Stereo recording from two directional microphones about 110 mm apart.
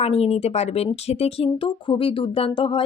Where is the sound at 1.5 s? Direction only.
50° left (ahead or behind).